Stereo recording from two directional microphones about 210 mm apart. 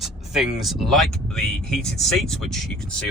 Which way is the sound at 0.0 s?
Centre (ahead or behind).